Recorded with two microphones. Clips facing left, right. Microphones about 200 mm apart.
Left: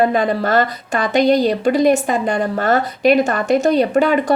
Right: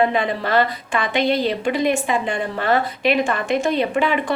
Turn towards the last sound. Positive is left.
turn(degrees=40)  # may be behind; listen again after turning